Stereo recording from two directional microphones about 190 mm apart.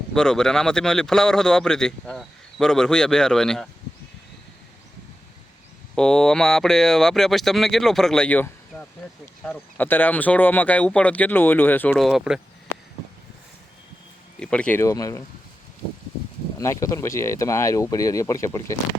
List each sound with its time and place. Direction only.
0.1 s speech: 5° left (ahead or behind)
5.9 s speech: 5° left (ahead or behind)
14.3 s speech: 5° left (ahead or behind)
16.6 s speech: 15° left (ahead or behind)